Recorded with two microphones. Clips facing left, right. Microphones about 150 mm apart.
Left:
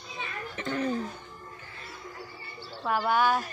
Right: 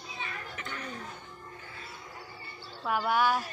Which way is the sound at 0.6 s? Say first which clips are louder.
Left 14 dB; 35° left (ahead or behind).